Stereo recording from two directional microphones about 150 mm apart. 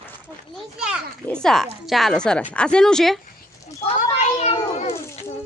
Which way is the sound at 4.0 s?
50° left (ahead or behind).